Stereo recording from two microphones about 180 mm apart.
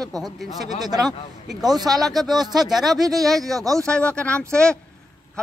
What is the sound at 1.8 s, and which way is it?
Speech, 20° right (ahead or behind).